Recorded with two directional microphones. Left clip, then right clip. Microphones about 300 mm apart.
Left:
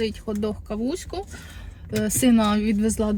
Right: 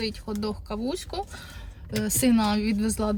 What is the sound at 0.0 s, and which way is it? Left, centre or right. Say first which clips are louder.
A woman's voice: left 4 dB; centre.